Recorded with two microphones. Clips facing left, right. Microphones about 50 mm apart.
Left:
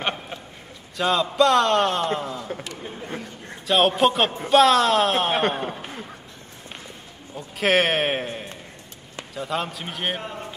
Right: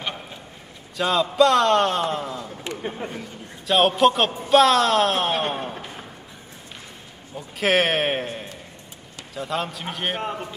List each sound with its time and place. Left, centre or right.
0.9 s a man's voice: centre
2.6 s speech: right
3.6 s a man's voice: centre
7.3 s a man's voice: centre